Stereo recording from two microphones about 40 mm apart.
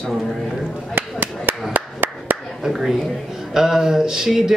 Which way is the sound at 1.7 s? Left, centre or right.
Right.